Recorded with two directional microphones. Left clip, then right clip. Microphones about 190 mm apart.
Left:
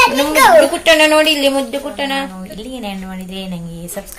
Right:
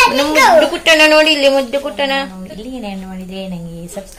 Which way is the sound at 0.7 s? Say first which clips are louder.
Right 1 dB; 15° right (ahead or behind).